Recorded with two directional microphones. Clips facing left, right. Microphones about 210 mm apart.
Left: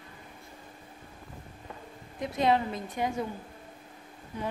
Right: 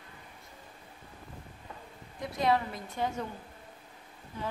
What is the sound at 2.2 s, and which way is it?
A woman's voice, 20° left (ahead or behind).